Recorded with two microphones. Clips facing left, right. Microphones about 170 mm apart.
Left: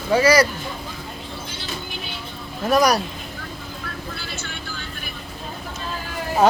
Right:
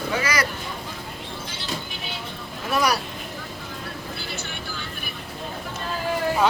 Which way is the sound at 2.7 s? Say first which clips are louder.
Left 5 dB; 40° left (ahead or behind).